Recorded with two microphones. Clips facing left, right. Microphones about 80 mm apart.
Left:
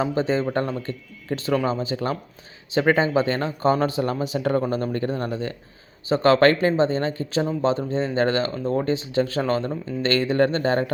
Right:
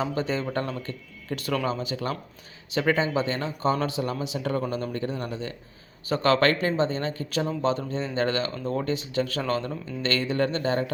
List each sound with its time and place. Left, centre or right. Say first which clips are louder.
0.0 s speech: left 5 dB; left